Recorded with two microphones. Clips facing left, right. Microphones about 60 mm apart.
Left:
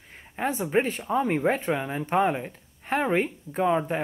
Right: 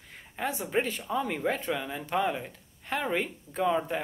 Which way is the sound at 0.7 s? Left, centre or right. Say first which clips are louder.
Left 5 dB; left.